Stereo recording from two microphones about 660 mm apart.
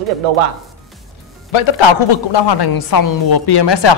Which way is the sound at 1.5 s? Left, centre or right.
Left.